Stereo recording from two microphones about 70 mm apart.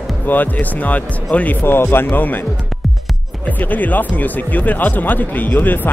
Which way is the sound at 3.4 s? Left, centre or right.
Left.